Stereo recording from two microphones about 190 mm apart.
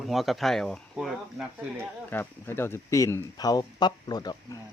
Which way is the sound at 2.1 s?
10° left (ahead or behind).